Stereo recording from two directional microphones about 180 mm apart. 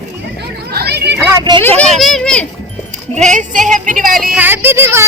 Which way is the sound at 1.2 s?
25° right (ahead or behind).